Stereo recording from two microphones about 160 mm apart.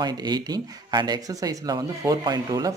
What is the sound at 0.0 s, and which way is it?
Speech, 25° right (ahead or behind).